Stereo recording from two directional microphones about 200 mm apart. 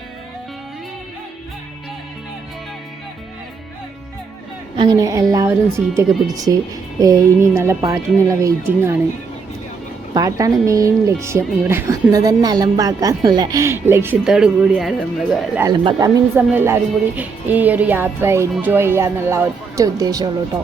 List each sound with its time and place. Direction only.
4.8 s speech: 20° right (ahead or behind)
10.2 s speech: 15° right (ahead or behind); by 15.4 s centre (ahead or behind)
15.7 s speech: 25° right (ahead or behind)